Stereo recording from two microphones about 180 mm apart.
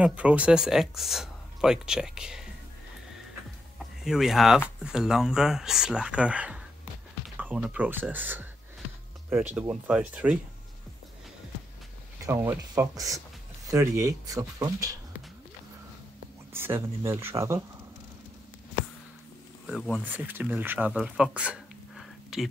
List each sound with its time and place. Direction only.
0.0 s speech: 5° right (ahead or behind)
4.0 s speech: centre (ahead or behind)
12.3 s speech: 15° right (ahead or behind)
16.5 s speech: 15° right (ahead or behind)
19.6 s speech: centre (ahead or behind)